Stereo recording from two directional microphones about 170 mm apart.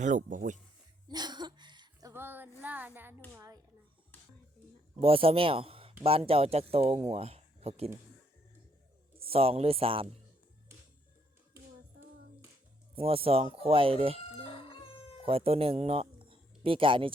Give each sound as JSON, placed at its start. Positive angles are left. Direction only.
{"t": 0.0, "sound": "speech", "side_deg": -50}
{"t": 1.0, "sound": "a sound", "side_deg": -25}
{"t": 3.3, "sound": "a child's voice", "side_deg": -20}
{"t": 4.9, "sound": "speech", "side_deg": -35}
{"t": 9.2, "sound": "speech", "side_deg": -35}
{"t": 13.0, "sound": "speech", "side_deg": -35}
{"t": 14.2, "sound": "chicken", "side_deg": 35}
{"t": 15.2, "sound": "speech", "side_deg": -35}